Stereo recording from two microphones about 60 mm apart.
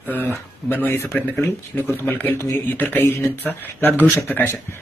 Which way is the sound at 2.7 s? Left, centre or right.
Left.